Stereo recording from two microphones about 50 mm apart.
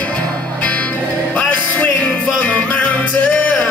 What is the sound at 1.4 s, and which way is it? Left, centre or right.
Music, left.